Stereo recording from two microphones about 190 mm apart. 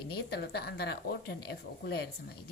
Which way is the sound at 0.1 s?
55° left (ahead or behind).